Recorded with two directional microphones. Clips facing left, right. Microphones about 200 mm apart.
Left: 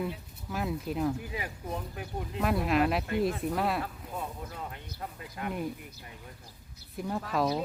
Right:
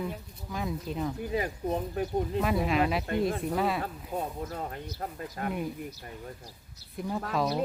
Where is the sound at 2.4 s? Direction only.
Centre (ahead or behind).